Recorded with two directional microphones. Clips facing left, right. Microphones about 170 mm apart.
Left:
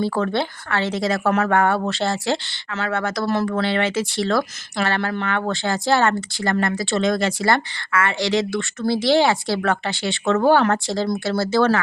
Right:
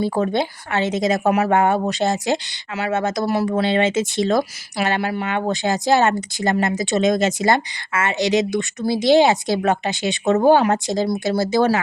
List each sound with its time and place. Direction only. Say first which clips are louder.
0.0 s a woman's voice: right 2 dB; 20° right (ahead or behind)